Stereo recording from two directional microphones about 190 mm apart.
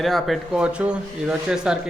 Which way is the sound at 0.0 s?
Centre (ahead or behind).